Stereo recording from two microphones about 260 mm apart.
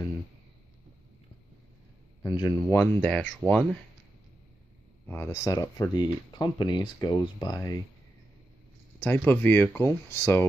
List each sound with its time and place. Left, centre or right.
2.2 s speech: centre
2.8 s speech: centre
5.0 s speech: centre
9.0 s speech: centre